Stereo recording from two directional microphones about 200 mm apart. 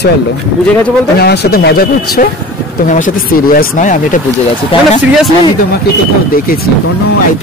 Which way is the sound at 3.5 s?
40° left (ahead or behind).